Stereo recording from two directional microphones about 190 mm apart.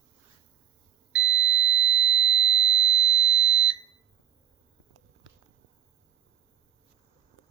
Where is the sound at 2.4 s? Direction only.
25° left (ahead or behind).